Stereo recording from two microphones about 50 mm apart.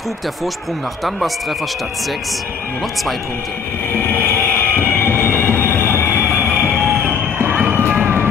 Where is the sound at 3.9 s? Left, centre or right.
Left.